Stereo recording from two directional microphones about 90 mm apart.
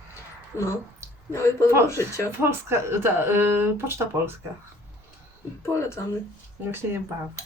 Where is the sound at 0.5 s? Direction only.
25° right (ahead or behind).